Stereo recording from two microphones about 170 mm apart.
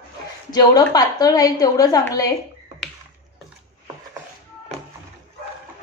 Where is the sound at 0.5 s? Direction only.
25° left (ahead or behind).